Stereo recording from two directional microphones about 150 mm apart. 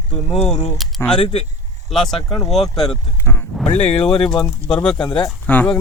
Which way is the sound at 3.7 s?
45° left (ahead or behind).